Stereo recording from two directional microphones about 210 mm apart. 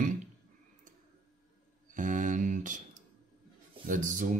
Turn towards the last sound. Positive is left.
turn(degrees=-40)  # may be behind; listen again after turning